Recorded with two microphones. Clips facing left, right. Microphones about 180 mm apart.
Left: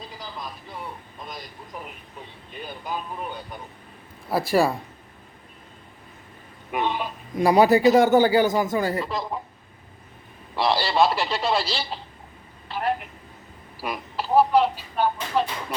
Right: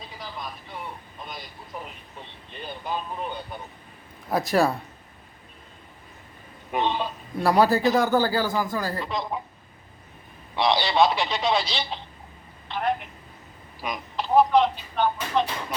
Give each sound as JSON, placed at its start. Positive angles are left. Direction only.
{"t": 0.0, "sound": "vehicle", "side_deg": 0}
{"t": 2.5, "sound": "a man's voice", "side_deg": 10}
{"t": 6.8, "sound": "a man's voice", "side_deg": 10}
{"t": 9.0, "sound": "speech", "side_deg": 5}
{"t": 10.5, "sound": "speech", "side_deg": 5}